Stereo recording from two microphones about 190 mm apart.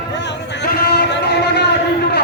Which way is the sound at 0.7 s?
60° left (ahead or behind).